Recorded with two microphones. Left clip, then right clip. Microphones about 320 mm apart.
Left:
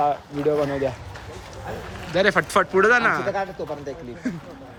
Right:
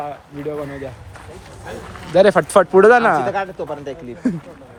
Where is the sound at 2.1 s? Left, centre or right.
Centre.